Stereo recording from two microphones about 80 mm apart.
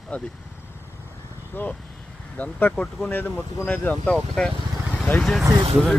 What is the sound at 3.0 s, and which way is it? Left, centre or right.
Speech, left.